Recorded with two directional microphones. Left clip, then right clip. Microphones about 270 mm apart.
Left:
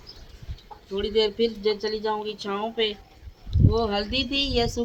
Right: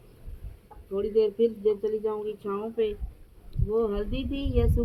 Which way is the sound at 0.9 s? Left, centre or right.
Left.